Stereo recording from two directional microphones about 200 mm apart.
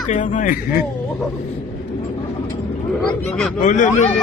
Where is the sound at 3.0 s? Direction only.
5° left (ahead or behind).